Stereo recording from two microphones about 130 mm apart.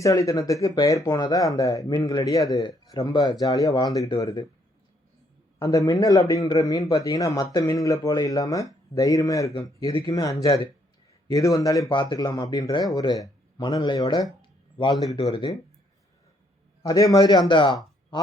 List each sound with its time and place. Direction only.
0.0 s speech: 25° left (ahead or behind)
5.6 s speech: 25° left (ahead or behind)
16.8 s speech: 30° left (ahead or behind)